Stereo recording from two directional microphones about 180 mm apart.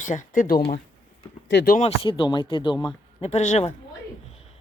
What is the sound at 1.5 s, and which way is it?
Speech, 70° left (ahead or behind).